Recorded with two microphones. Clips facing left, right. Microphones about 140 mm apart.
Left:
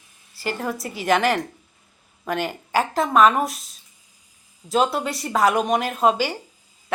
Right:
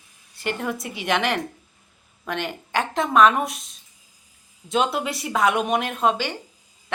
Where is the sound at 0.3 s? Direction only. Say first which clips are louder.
Even; centre (ahead or behind).